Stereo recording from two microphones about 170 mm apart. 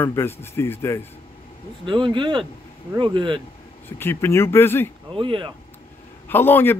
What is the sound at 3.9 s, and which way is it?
Speech, 15° left (ahead or behind).